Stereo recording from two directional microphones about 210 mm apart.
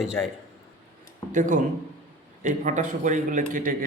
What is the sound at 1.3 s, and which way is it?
Speech, 40° right (ahead or behind).